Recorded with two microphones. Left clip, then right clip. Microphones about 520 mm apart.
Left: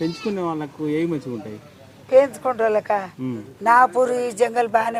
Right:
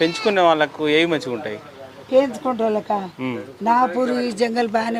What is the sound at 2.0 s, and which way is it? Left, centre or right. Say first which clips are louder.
A man's voice: left 2 dB; left.